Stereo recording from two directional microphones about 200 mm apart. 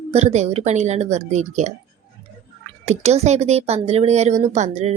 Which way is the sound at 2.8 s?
35° right (ahead or behind).